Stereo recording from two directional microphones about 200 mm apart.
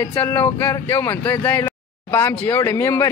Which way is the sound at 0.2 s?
10° left (ahead or behind).